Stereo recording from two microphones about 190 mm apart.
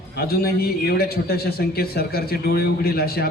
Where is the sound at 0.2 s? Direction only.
55° left (ahead or behind).